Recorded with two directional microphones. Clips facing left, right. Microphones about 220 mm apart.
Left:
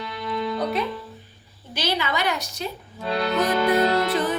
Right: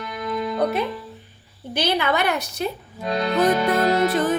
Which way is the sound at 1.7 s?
55° right (ahead or behind).